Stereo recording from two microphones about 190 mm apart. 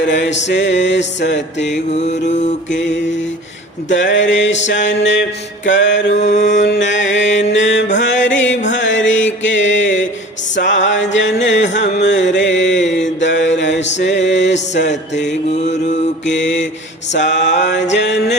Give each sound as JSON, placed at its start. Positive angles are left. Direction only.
{"t": 0.0, "sound": "mantra", "side_deg": 70}
{"t": 1.9, "sound": "mantra", "side_deg": 35}
{"t": 2.6, "sound": "mantra", "side_deg": 70}
{"t": 6.1, "sound": "mantra", "side_deg": 35}
{"t": 6.7, "sound": "mantra", "side_deg": 70}
{"t": 8.7, "sound": "music", "side_deg": 75}
{"t": 14.8, "sound": "mantra", "side_deg": 65}
{"t": 17.1, "sound": "a sound", "side_deg": 70}